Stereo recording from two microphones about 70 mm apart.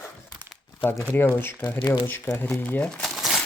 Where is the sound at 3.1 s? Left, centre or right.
Centre.